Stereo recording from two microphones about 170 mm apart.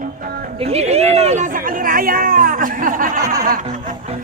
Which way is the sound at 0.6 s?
35° right (ahead or behind).